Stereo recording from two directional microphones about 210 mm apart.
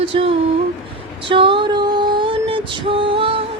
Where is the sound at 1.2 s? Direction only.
25° right (ahead or behind).